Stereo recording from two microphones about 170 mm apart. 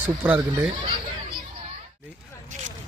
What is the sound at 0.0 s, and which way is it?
Speech, 10° right (ahead or behind).